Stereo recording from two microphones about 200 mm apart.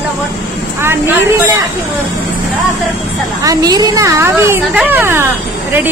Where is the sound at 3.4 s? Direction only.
20° right (ahead or behind).